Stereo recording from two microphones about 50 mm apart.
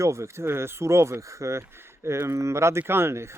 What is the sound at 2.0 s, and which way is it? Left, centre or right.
Speech, right.